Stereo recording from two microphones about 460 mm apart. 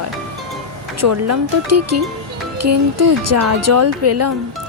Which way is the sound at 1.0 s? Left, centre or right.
Right.